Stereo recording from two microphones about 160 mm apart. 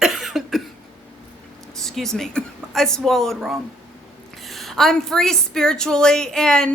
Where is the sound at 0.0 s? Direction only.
Centre (ahead or behind).